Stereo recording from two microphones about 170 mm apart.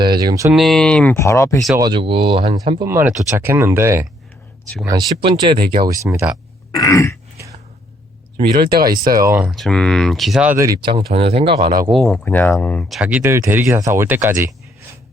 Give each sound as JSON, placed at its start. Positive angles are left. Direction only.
{"t": 0.2, "sound": "speech", "side_deg": -20}
{"t": 0.5, "sound": "speech", "side_deg": 0}
{"t": 1.1, "sound": "speech", "side_deg": 15}
{"t": 1.7, "sound": "speech", "side_deg": -25}
{"t": 2.9, "sound": "speech", "side_deg": -10}
{"t": 6.7, "sound": "throat clearing", "side_deg": 20}
{"t": 8.4, "sound": "speech", "side_deg": -25}
{"t": 9.4, "sound": "speech", "side_deg": 0}
{"t": 10.5, "sound": "speech", "side_deg": -15}
{"t": 10.8, "sound": "speech", "side_deg": -35}
{"t": 11.9, "sound": "speech", "side_deg": 5}